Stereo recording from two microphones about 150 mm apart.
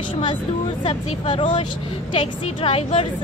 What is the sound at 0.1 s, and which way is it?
A woman's voice, 35° left (ahead or behind).